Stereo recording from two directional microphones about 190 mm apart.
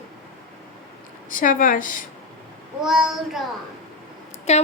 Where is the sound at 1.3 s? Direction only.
45° left (ahead or behind).